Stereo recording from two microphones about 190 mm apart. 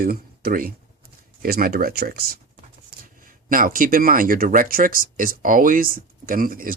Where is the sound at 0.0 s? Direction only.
50° right (ahead or behind).